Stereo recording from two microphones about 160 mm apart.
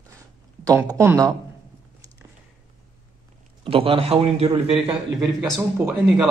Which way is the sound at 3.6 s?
35° right (ahead or behind).